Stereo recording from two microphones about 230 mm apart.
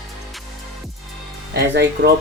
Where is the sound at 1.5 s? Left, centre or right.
Right.